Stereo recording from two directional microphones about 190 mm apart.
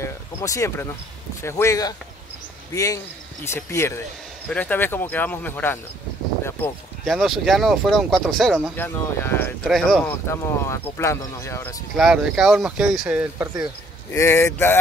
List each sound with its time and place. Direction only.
0.0 s a sound: 15° left (ahead or behind)
1.4 s speech: 15° left (ahead or behind)
7.1 s speech: centre (ahead or behind)
10.2 s speech: 15° left (ahead or behind)
12.0 s speech: centre (ahead or behind)
14.1 s speech: 15° left (ahead or behind)